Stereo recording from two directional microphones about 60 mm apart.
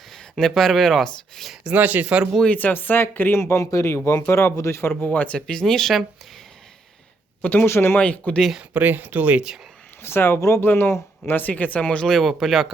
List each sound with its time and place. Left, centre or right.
0.1 s speech: centre
1.6 s speech: right
2.5 s speech: left
3.3 s speech: left
4.8 s speech: left
5.5 s speech: centre
7.4 s speech: left
7.7 s speech: left
7.9 s speech: left
8.7 s speech: right
10.0 s speech: left
11.3 s speech: left
12.1 s speech: centre